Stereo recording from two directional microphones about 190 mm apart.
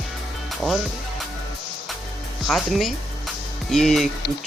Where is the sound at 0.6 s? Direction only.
Centre (ahead or behind).